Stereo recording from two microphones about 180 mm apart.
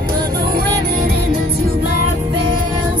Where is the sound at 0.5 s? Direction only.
60° right (ahead or behind).